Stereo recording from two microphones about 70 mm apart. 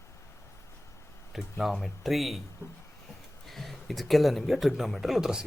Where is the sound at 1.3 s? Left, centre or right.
Centre.